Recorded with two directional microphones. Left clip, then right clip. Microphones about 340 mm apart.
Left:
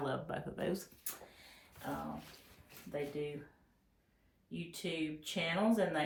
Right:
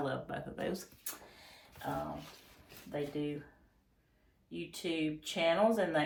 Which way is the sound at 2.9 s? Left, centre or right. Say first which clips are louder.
Right 2 dB; centre.